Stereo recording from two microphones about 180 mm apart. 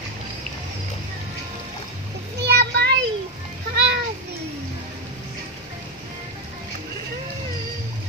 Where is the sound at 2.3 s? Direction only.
65° right (ahead or behind).